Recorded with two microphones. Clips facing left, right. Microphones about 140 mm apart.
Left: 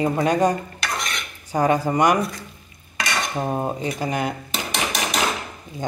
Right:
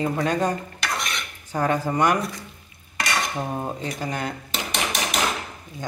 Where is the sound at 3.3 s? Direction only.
25° left (ahead or behind).